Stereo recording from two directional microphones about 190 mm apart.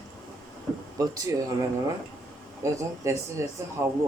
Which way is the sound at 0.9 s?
20° right (ahead or behind).